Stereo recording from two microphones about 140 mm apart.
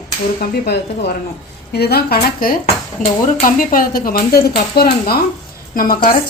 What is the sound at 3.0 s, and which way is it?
Speech, 70° left (ahead or behind).